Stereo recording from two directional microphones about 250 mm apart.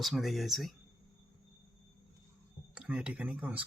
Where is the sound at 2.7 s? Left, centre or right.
Centre.